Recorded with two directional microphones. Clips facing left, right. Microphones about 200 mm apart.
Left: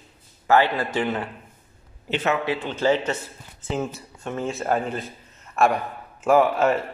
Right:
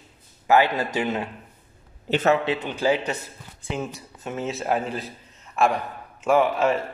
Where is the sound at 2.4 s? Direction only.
20° right (ahead or behind).